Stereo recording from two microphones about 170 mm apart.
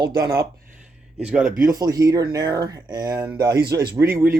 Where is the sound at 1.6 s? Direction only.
20° right (ahead or behind).